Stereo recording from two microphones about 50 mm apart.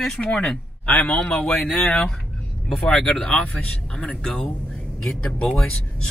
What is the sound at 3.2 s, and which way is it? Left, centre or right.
Speech, left.